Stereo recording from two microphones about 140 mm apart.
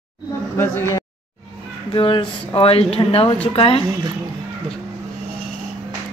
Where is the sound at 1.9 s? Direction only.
35° left (ahead or behind).